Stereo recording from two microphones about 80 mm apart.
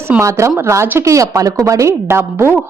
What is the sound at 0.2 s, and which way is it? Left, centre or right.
Speech, right.